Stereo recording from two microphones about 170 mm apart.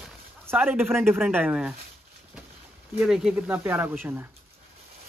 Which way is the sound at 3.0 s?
5° right (ahead or behind).